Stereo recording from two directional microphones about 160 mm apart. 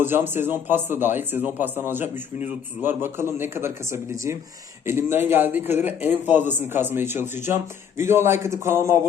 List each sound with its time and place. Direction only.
0.0 s speech: 15° right (ahead or behind)